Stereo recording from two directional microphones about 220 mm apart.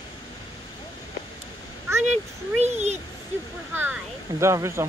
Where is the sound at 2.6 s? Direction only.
30° right (ahead or behind).